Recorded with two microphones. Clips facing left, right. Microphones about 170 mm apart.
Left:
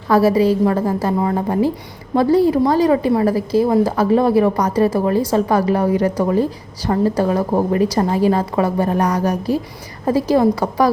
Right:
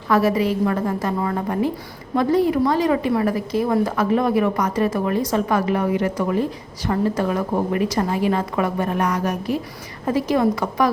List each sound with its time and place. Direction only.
0.1 s a woman's voice: 30° left (ahead or behind)